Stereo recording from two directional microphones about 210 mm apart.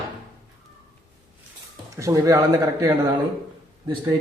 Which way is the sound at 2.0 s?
15° right (ahead or behind).